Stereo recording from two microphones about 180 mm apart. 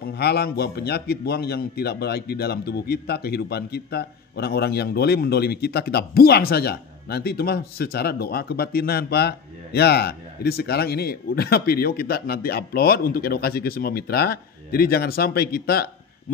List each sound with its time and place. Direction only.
0.0 s a man's voice: 65° left (ahead or behind)